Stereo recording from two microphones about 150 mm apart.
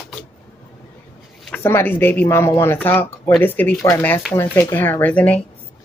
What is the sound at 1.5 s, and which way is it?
Speech, 15° left (ahead or behind).